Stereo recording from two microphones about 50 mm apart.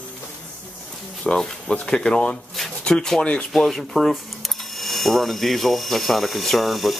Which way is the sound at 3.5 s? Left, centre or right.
Centre.